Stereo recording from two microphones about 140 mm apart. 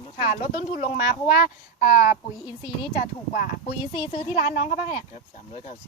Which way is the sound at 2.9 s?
60° left (ahead or behind).